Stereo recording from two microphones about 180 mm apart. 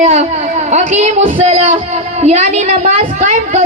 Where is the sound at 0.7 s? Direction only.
40° right (ahead or behind).